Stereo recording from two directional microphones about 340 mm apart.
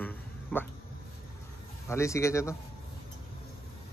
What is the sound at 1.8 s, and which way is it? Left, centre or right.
Speech, centre.